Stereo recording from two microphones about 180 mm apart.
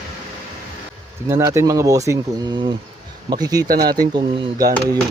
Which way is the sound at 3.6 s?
55° right (ahead or behind).